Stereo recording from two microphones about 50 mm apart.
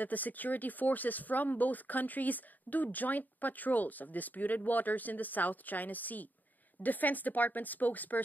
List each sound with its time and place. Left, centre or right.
0.0 s speech: left